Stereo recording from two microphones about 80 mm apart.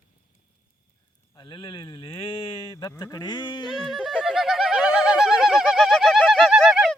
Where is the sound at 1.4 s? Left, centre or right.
Left.